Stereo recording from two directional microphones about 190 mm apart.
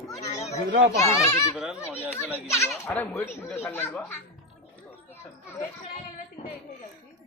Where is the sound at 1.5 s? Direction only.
5° right (ahead or behind).